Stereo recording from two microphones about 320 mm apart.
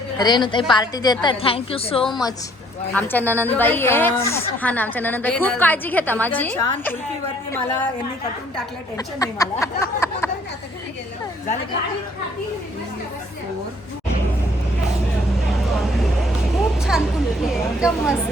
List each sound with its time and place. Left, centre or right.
0.2 s a woman's voice: centre
2.9 s a woman's voice: centre
9.0 s speech: centre
16.9 s a woman's voice: centre